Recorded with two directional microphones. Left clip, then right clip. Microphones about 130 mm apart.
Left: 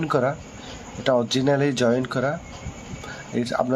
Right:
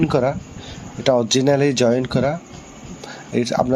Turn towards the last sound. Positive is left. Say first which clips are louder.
# right 5 dB
turn(degrees=-20)  # may be behind; listen again after turning